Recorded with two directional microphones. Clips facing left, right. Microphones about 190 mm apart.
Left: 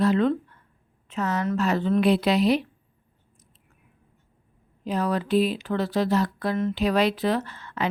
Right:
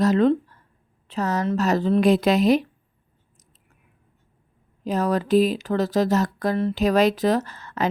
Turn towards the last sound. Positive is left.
turn(degrees=-40)  # may be behind; listen again after turning